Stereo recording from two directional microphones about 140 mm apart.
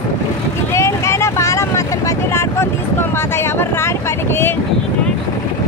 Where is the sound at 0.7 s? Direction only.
20° left (ahead or behind).